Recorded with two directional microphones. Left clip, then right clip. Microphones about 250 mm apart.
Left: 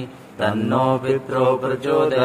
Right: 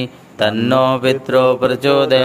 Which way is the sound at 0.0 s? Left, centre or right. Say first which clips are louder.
Right 6 dB; right.